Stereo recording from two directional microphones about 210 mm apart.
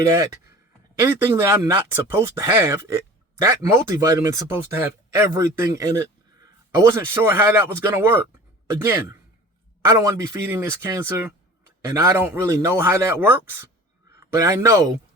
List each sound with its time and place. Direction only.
0.0 s speech: 15° right (ahead or behind)
9.9 s speech: 15° right (ahead or behind)